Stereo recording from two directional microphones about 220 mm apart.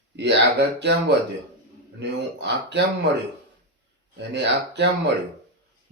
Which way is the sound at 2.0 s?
50° right (ahead or behind).